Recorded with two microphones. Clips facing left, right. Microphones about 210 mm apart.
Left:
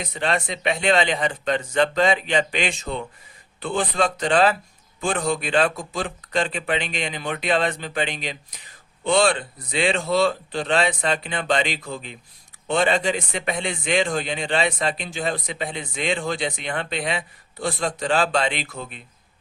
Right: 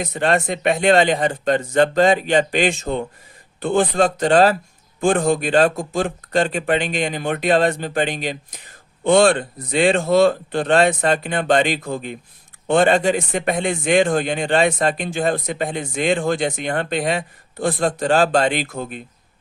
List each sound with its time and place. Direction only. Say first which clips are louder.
0.0 s speech: right 6 dB; 45° right (ahead or behind)